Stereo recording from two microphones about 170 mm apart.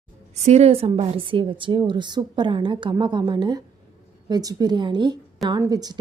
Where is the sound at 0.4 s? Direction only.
40° right (ahead or behind).